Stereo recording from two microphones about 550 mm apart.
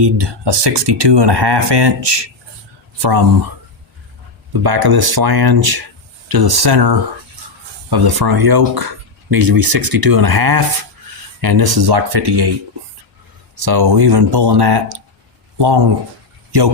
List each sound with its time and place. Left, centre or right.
0.0 s speech: right
4.6 s speech: right
13.6 s speech: right